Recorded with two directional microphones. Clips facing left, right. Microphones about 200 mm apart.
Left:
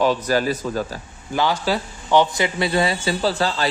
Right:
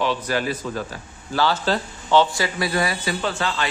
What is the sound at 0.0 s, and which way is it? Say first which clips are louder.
Speech: left 4 dB; 40° left (ahead or behind).